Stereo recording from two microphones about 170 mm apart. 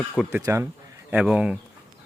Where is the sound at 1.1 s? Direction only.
5° right (ahead or behind).